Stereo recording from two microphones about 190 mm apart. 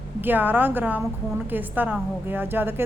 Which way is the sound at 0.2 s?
10° right (ahead or behind).